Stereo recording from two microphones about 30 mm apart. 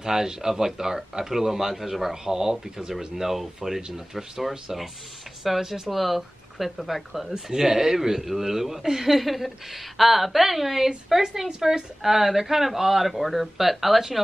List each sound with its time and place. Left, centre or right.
0.0 s speech: centre
2.3 s a woman's voice: centre
3.2 s a woman's voice: centre